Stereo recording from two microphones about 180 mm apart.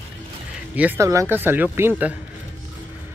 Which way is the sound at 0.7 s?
10° right (ahead or behind).